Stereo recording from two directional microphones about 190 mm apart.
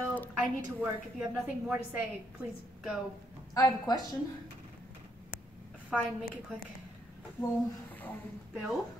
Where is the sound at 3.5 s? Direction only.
20° left (ahead or behind).